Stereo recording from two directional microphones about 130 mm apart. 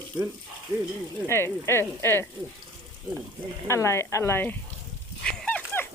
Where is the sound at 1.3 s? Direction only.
20° left (ahead or behind).